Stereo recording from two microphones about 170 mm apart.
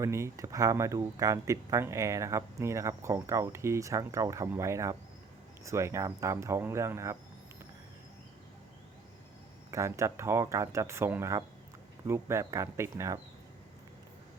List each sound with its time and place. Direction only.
0.0 s speech: 15° right (ahead or behind)
9.7 s speech: 15° right (ahead or behind)